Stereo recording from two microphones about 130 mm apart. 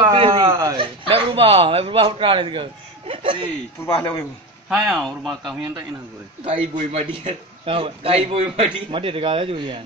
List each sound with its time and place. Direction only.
0.0 s a sound: 40° right (ahead or behind)
0.5 s speech: 25° right (ahead or behind)
0.7 s speech: 45° right (ahead or behind)
3.8 s a man's voice: 20° left (ahead or behind)
4.6 s speech: 5° right (ahead or behind)
6.4 s a man's voice: 50° right (ahead or behind)